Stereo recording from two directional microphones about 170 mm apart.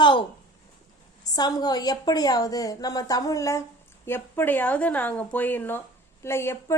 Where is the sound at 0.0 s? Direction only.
30° left (ahead or behind).